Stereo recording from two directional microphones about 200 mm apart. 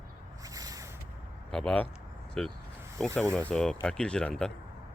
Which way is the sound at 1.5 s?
5° left (ahead or behind).